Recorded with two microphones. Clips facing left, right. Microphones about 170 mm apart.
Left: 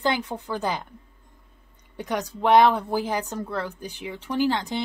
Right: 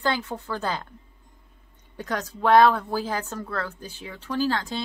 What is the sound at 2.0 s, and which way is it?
A woman's voice, 15° left (ahead or behind).